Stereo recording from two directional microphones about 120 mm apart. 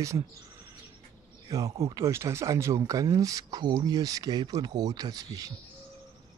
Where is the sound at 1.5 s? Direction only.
25° right (ahead or behind).